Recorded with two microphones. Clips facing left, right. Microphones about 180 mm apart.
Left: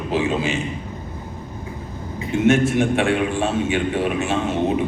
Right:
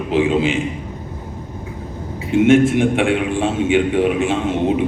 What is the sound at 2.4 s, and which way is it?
A man's voice, 15° right (ahead or behind).